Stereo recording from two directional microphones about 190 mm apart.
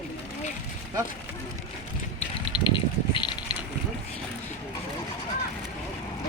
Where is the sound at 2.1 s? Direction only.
25° left (ahead or behind).